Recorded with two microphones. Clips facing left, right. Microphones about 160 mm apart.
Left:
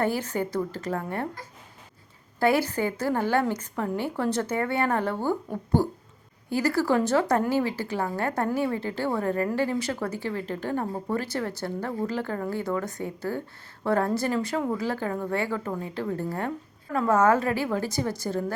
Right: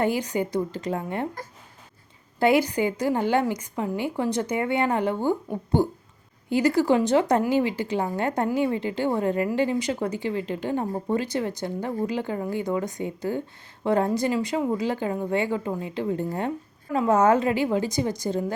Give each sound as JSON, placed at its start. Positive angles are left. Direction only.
{"t": 0.0, "sound": "a woman's voice", "side_deg": -15}
{"t": 2.4, "sound": "a woman's voice", "side_deg": -15}